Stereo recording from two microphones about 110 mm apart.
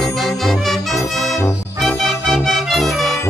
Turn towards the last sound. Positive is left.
turn(degrees=0)  # may be behind; listen again after turning